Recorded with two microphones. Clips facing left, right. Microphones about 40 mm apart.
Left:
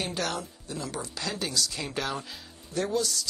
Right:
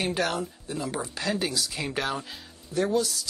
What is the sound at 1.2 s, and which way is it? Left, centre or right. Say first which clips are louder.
Speech: right 3 dB; centre.